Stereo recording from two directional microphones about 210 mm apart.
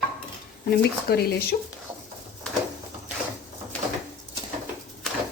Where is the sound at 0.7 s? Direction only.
50° left (ahead or behind).